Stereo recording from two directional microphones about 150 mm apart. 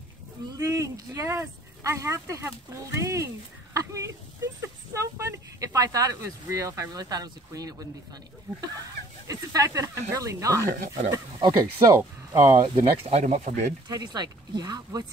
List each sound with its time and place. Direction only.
0.5 s speech: 20° right (ahead or behind)
9.3 s speech: 25° right (ahead or behind)
12.7 s speech: 45° right (ahead or behind)
13.8 s speech: 25° right (ahead or behind)